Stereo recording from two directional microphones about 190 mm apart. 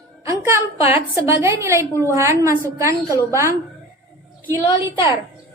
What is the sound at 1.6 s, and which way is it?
Speech, 15° right (ahead or behind).